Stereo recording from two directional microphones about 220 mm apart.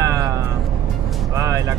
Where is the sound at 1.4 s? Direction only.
15° right (ahead or behind).